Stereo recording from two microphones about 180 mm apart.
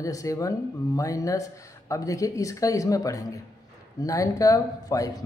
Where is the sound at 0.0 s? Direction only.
20° left (ahead or behind).